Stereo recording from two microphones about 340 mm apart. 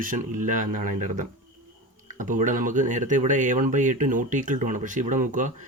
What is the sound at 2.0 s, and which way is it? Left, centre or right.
Speech, right.